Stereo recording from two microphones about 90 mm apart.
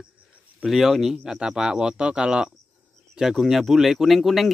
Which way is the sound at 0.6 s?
5° right (ahead or behind).